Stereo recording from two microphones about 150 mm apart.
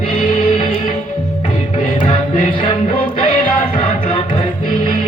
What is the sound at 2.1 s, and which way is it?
Music, 35° left (ahead or behind).